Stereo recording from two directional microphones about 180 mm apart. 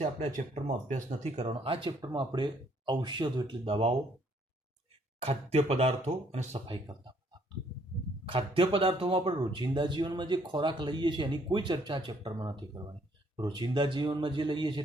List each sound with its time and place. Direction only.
0.0 s speech: 40° right (ahead or behind)
5.2 s speech: 35° right (ahead or behind)
8.3 s speech: 30° right (ahead or behind)